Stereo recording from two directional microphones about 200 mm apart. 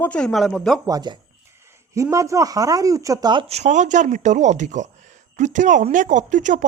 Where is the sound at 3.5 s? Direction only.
35° right (ahead or behind).